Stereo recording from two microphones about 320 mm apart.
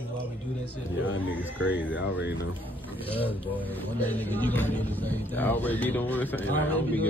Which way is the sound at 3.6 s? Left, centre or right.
Centre.